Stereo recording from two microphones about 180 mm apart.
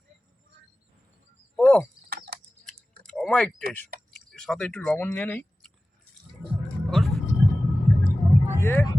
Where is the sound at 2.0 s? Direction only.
60° right (ahead or behind).